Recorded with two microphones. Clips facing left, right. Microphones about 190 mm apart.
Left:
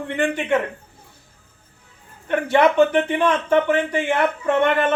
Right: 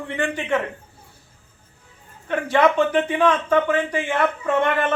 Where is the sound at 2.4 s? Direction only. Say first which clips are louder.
Left 2 dB; 60° left (ahead or behind).